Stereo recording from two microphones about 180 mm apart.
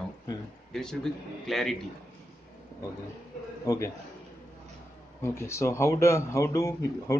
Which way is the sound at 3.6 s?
20° left (ahead or behind).